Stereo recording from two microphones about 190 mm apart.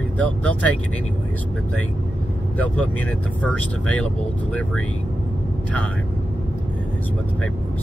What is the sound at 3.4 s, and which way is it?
Speech, 5° left (ahead or behind).